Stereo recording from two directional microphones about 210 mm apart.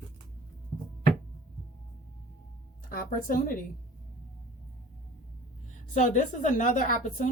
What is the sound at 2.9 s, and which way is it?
Speech, 40° left (ahead or behind).